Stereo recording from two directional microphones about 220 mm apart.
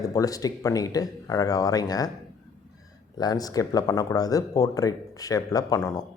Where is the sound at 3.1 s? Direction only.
15° left (ahead or behind).